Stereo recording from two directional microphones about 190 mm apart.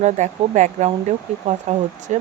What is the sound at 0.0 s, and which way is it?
Speech, 40° right (ahead or behind).